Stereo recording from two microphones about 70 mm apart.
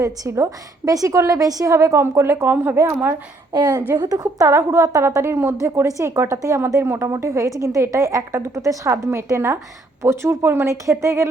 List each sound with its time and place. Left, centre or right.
0.0 s a woman's voice: right
3.5 s a woman's voice: right
4.1 s a woman's voice: right
10.8 s a woman's voice: right